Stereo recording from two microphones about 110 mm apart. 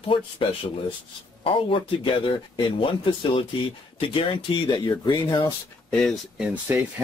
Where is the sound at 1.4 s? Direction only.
55° left (ahead or behind); by 5.5 s 40° left (ahead or behind).